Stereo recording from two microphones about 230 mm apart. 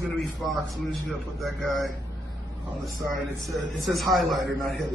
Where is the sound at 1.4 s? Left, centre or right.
Centre.